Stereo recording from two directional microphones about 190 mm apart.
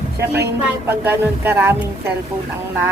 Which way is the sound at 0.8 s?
10° right (ahead or behind).